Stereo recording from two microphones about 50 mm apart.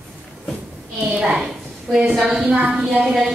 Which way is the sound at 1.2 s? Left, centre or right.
Centre.